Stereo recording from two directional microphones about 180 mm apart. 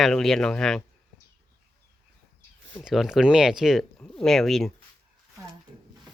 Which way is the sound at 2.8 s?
5° right (ahead or behind).